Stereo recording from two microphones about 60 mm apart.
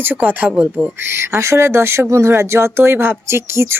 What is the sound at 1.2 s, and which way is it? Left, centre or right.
Speech, right.